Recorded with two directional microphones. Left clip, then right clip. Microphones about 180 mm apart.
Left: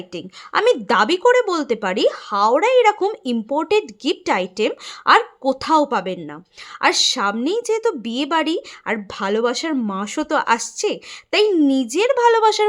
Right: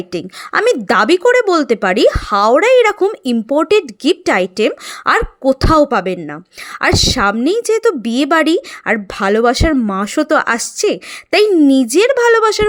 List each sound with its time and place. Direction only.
0.1 s speech: 25° right (ahead or behind)